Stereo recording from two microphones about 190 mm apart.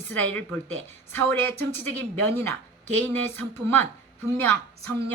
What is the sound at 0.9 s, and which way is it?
Speech, 10° left (ahead or behind).